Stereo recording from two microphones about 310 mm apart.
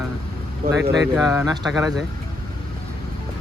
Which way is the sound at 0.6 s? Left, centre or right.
Right.